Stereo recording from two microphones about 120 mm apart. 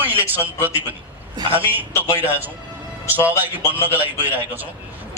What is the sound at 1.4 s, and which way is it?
Speech, 50° right (ahead or behind).